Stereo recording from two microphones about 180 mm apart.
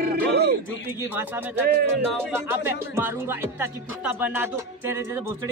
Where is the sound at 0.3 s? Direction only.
65° right (ahead or behind).